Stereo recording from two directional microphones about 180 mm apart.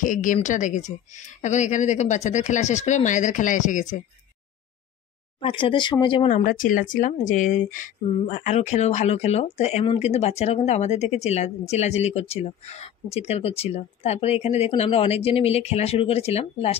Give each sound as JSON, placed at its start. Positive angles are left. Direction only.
{"t": 0.0, "sound": "a woman's voice", "side_deg": 45}
{"t": 5.4, "sound": "speech", "side_deg": 30}
{"t": 6.2, "sound": "speech", "side_deg": 45}